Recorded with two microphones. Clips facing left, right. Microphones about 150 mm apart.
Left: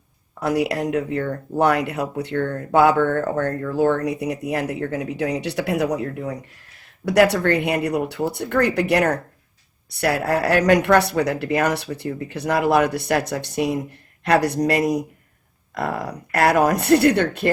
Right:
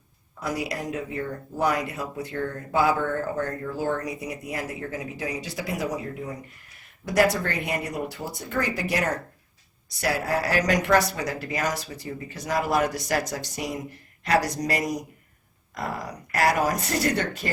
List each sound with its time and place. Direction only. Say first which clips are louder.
0.3 s speech: left 8 dB; 65° left (ahead or behind)